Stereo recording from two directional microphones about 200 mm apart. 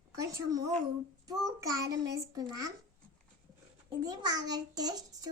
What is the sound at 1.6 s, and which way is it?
Child singing, 15° right (ahead or behind).